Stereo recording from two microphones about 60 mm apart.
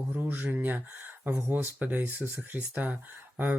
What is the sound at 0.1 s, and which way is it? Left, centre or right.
Speech, right.